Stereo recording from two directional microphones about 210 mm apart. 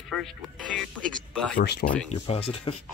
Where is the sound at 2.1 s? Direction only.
25° left (ahead or behind).